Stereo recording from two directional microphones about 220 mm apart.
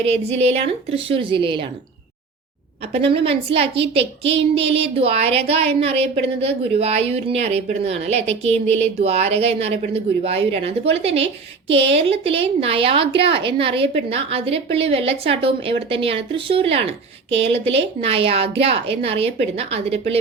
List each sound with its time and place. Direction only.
0.3 s a woman's voice: 30° right (ahead or behind)
2.9 s a woman's voice: 25° right (ahead or behind)